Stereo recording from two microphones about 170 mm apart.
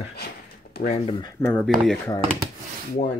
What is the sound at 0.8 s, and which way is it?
Speech, 40° left (ahead or behind).